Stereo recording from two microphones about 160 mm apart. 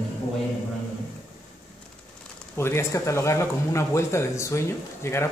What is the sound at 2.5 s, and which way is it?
Speech, 15° left (ahead or behind).